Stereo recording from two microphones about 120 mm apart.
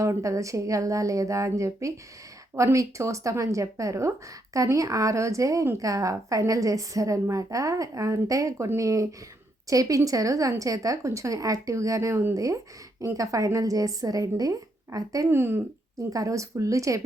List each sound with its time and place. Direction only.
0.0 s a woman's voice: 25° right (ahead or behind)